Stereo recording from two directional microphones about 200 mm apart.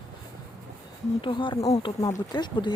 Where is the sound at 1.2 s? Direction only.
25° left (ahead or behind).